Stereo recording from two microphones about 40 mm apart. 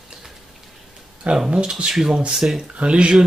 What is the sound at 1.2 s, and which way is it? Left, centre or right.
Speech, right.